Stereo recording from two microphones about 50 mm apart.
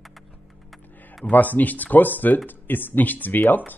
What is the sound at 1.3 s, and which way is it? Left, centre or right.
Speech, left.